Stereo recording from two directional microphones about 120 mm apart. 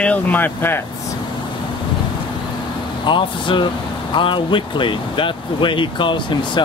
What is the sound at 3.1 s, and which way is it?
Speech, 45° left (ahead or behind).